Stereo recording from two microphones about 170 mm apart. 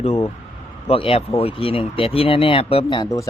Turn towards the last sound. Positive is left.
turn(degrees=25)  # may be behind; listen again after turning